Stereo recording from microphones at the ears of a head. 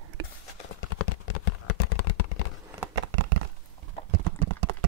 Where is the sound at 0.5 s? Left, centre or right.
Left.